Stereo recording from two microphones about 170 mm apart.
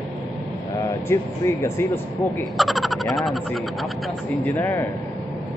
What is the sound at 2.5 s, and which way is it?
Speech, centre (ahead or behind).